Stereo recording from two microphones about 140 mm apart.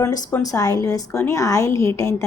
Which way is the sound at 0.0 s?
20° left (ahead or behind).